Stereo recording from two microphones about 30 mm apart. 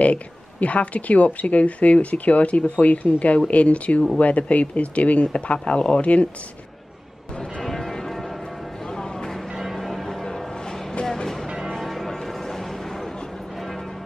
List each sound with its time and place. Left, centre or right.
0.0 s speech: left
2.8 s speech: left
5.2 s speech: left
5.9 s speech: left
7.6 s church bell: centre
8.8 s a sound: left
9.8 s change ringing: centre
10.0 s music: centre
11.8 s music: centre
12.3 s a sound: centre